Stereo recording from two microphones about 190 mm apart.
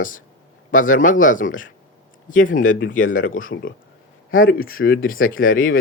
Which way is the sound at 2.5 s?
45° left (ahead or behind).